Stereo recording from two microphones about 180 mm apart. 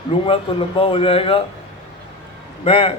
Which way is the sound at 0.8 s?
30° left (ahead or behind).